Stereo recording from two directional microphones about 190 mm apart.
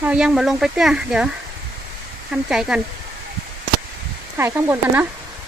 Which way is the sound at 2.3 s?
5° right (ahead or behind).